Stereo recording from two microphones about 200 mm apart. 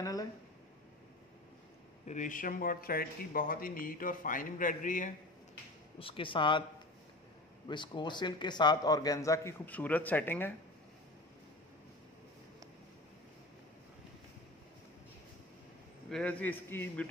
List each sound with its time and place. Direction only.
0.0 s a sound: 15° left (ahead or behind)
2.0 s speech: 40° left (ahead or behind)
5.9 s a man's voice: 25° left (ahead or behind)
7.6 s a man's voice: 25° left (ahead or behind)
16.1 s a man's voice: 5° left (ahead or behind)